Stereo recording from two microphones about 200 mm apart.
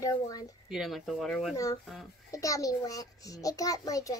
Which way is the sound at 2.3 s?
15° left (ahead or behind).